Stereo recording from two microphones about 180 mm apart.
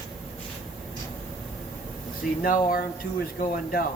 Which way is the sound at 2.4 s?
55° left (ahead or behind).